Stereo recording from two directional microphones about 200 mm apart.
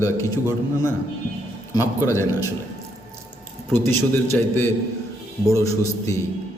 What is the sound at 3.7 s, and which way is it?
A man's voice, 10° left (ahead or behind).